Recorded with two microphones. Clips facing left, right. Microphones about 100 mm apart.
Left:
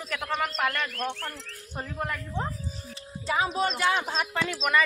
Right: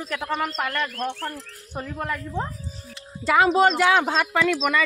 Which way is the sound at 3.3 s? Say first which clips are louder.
Right 9 dB; 85° right.